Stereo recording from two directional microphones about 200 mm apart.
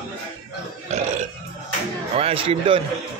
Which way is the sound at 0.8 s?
35° right (ahead or behind).